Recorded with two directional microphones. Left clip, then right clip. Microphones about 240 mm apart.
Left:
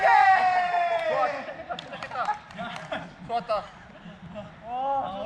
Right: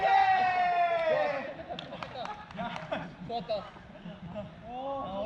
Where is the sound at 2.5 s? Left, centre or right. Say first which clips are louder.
Left 2 dB; centre.